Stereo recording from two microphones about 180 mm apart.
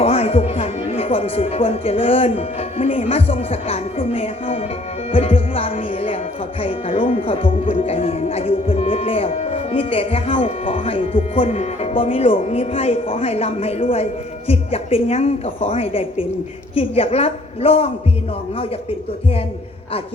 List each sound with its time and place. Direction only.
0.0 s speech: 35° left (ahead or behind)
5.1 s music: 30° left (ahead or behind)
6.6 s speech: 30° left (ahead or behind)